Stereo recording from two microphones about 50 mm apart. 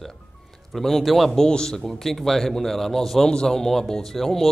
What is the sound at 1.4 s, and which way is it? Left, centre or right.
A man's voice, centre.